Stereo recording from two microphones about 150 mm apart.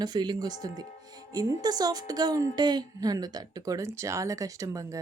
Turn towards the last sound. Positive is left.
turn(degrees=-20)  # may be behind; listen again after turning